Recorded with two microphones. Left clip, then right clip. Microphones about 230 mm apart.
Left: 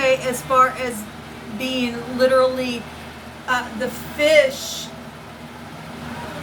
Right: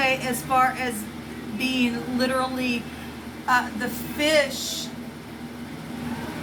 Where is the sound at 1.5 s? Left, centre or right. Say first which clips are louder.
Left 1 dB; centre.